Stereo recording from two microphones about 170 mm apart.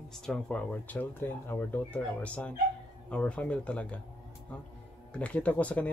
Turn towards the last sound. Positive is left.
turn(degrees=10)  # may be behind; listen again after turning